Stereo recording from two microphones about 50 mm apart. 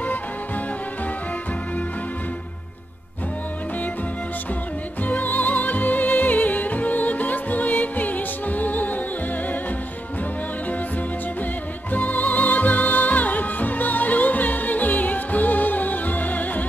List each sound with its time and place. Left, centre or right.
5.0 s music: left
11.9 s music: left